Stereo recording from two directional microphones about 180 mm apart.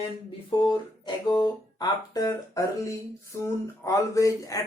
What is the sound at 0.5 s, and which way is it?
Speech, 25° left (ahead or behind).